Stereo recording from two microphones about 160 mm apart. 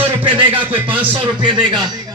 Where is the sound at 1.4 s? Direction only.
30° right (ahead or behind).